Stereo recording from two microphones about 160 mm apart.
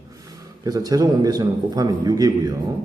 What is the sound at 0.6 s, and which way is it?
A man's voice, 25° right (ahead or behind).